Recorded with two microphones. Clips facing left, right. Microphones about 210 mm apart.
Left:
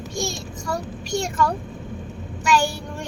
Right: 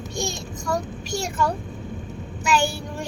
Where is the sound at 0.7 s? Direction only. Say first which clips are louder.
Even; 5° right (ahead or behind).